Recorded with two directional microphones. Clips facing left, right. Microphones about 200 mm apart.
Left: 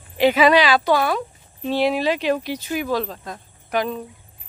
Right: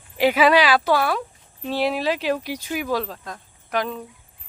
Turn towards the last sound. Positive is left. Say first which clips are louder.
# left 2 dB
turn(degrees=0)  # may be behind; listen again after turning